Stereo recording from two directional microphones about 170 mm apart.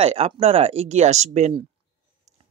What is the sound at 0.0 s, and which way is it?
Speech, 35° right (ahead or behind).